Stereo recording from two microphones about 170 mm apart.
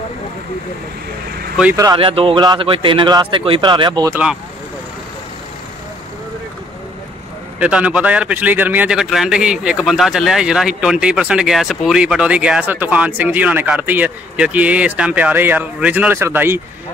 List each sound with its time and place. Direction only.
2.0 s a man's voice: 30° right (ahead or behind)
4.1 s a man's voice: 5° right (ahead or behind)
7.6 s a man's voice: 5° right (ahead or behind)